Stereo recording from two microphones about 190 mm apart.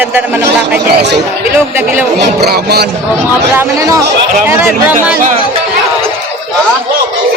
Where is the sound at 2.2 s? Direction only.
55° right (ahead or behind).